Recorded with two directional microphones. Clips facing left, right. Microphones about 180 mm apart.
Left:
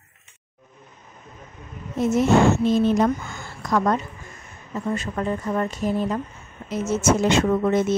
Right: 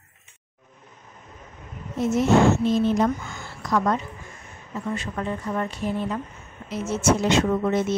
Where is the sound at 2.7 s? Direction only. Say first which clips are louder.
Left 2 dB; 50° left (ahead or behind).